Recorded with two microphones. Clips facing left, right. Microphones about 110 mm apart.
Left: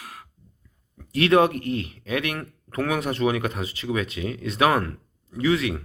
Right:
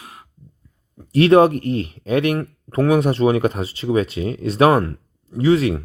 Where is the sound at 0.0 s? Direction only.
25° right (ahead or behind).